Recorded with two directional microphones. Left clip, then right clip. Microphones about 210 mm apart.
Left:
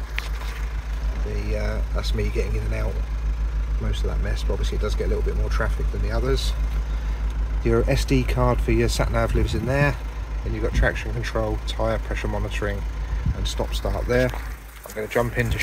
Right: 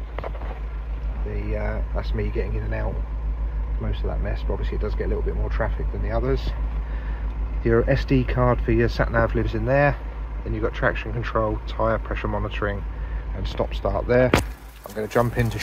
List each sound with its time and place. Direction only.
1.3 s speech: 10° left (ahead or behind)
7.6 s speech: 10° left (ahead or behind)
15.0 s speech: 15° right (ahead or behind)